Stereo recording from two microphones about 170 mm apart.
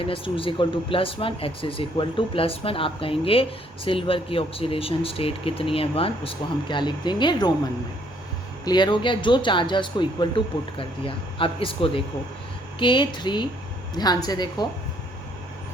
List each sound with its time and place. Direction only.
0.0 s speech: 30° left (ahead or behind)
8.6 s speech: 25° left (ahead or behind)